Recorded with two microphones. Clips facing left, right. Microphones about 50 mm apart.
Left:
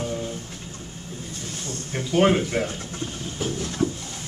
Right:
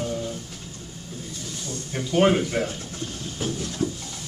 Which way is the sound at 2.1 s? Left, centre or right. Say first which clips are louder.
Even; centre.